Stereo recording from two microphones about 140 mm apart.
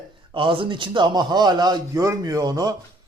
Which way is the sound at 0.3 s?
40° right (ahead or behind).